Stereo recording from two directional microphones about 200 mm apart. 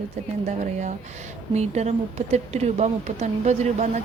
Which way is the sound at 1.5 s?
35° right (ahead or behind).